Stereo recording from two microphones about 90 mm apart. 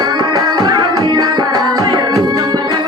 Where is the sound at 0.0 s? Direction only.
50° right (ahead or behind).